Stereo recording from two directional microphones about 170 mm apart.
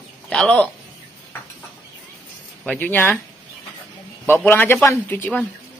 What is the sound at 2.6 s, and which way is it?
Speech, 10° left (ahead or behind).